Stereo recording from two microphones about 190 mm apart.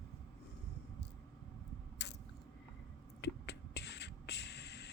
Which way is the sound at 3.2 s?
65° left (ahead or behind).